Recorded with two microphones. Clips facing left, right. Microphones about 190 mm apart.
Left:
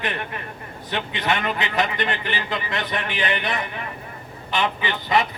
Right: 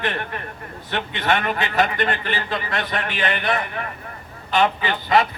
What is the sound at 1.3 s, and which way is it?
A man's voice, 15° left (ahead or behind).